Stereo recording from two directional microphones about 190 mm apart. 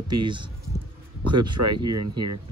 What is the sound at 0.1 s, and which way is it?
Speech, 25° right (ahead or behind).